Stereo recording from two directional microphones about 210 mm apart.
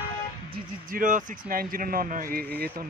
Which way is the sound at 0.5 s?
40° right (ahead or behind).